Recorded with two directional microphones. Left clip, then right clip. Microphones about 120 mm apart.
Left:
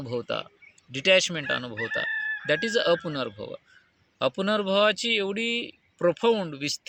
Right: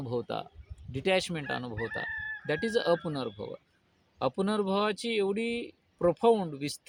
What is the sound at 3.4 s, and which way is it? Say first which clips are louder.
Speech: left 3 dB; 10° left (ahead or behind).